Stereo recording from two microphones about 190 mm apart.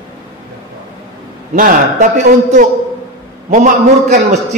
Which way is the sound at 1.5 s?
45° right (ahead or behind).